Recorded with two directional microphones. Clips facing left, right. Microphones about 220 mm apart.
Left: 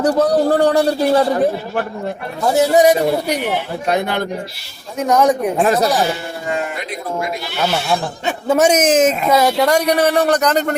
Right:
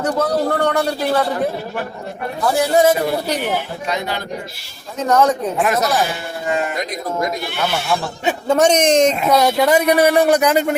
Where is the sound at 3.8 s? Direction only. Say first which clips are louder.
Left 8 dB; 55° left (ahead or behind).